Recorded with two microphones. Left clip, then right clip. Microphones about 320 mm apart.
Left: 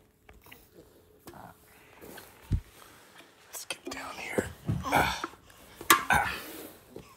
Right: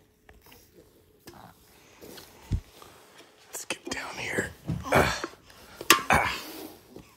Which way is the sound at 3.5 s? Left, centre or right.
Right.